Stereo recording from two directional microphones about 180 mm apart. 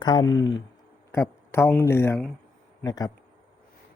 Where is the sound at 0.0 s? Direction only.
25° left (ahead or behind).